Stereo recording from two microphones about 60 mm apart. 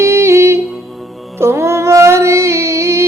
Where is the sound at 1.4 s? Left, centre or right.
Right.